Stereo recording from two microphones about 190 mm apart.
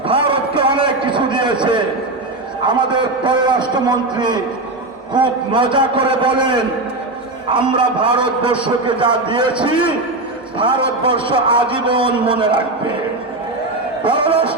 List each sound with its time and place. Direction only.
0.1 s a sound: 30° right (ahead or behind)
2.6 s a man's voice: 25° right (ahead or behind)
14.0 s a man's voice: 25° right (ahead or behind)